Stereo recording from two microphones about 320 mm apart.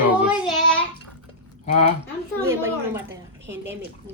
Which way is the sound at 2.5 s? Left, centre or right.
Centre.